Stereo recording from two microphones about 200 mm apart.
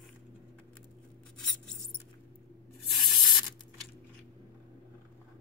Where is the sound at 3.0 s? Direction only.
Centre (ahead or behind).